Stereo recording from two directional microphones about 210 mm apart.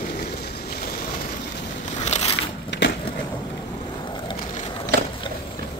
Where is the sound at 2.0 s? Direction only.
30° left (ahead or behind).